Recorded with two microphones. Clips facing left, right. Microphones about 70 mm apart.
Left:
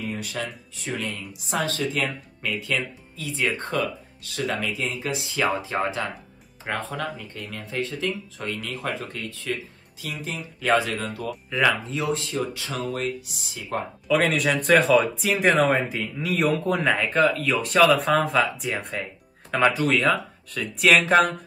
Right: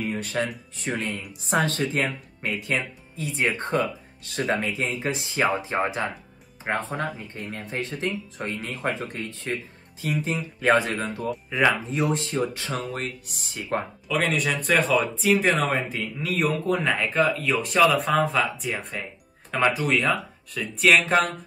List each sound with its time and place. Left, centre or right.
0.0 s speech: right
8.4 s speech: right
8.6 s speech: right
13.3 s speech: right
14.0 s speech: centre